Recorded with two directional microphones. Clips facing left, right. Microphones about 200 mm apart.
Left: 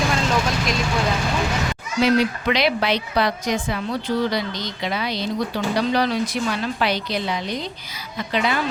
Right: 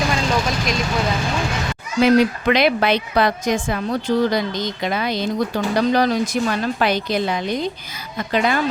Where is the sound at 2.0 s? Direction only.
50° right (ahead or behind).